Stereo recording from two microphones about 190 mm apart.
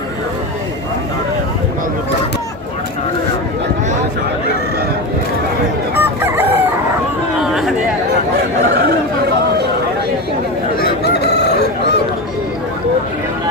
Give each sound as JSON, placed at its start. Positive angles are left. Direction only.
{"t": 6.0, "sound": "chicken", "side_deg": -10}
{"t": 7.3, "sound": "chatter", "side_deg": 0}
{"t": 10.8, "sound": "crowing", "side_deg": 60}